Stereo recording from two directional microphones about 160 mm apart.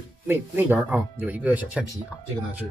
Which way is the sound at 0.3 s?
15° right (ahead or behind).